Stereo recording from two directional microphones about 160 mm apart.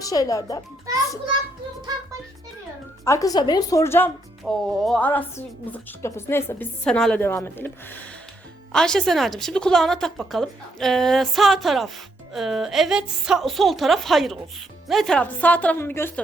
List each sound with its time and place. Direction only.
0.0 s speech: 20° left (ahead or behind)
3.0 s speech: 20° left (ahead or behind)
4.4 s a woman's voice: centre (ahead or behind)